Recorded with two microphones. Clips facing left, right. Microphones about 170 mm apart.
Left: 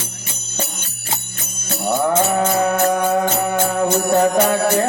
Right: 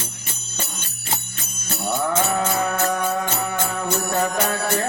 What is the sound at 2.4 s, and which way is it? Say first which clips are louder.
Music: left 5 dB; 40° left (ahead or behind).